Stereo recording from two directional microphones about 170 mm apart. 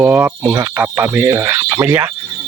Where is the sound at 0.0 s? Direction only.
10° right (ahead or behind).